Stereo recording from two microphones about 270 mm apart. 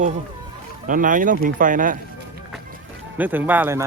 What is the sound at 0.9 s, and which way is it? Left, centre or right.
Speech, right.